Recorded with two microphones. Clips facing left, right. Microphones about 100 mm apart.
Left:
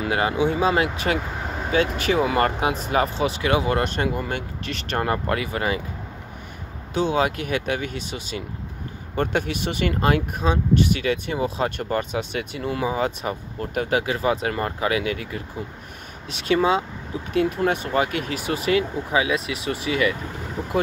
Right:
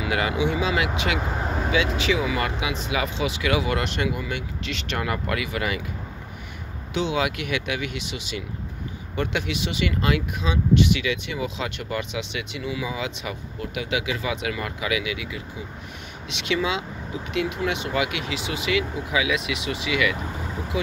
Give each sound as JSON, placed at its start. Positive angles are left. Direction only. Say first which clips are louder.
{"t": 0.0, "sound": "speech", "louder": "left 2 dB", "side_deg": 35}
{"t": 6.9, "sound": "speech", "louder": "left 3 dB", "side_deg": 40}